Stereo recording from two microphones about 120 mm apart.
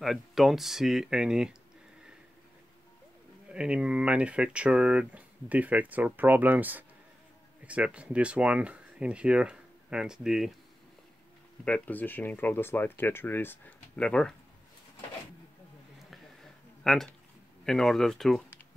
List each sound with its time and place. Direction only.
0.0 s speech: centre (ahead or behind)
3.5 s speech: 10° right (ahead or behind)
11.6 s speech: 10° left (ahead or behind)
16.8 s speech: centre (ahead or behind)